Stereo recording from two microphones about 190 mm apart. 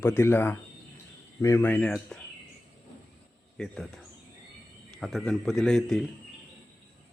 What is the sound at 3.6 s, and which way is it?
Speech, centre (ahead or behind).